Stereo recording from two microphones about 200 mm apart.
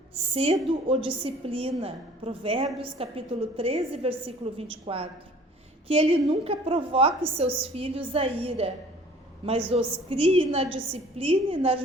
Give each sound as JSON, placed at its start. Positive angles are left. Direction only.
{"t": 0.3, "sound": "a woman's voice", "side_deg": -25}